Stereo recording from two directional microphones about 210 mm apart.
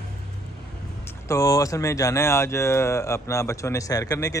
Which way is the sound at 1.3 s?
15° left (ahead or behind).